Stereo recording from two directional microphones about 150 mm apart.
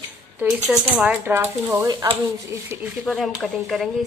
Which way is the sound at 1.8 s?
25° right (ahead or behind).